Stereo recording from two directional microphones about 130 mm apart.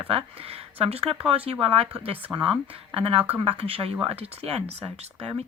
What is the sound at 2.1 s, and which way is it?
Speech, 15° right (ahead or behind).